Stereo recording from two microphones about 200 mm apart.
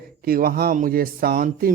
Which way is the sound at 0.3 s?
45° right (ahead or behind).